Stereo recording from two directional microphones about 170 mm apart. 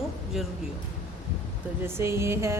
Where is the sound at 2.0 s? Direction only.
15° right (ahead or behind).